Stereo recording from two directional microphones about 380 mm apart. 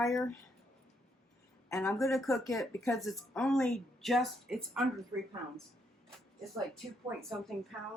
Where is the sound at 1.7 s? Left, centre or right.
Centre.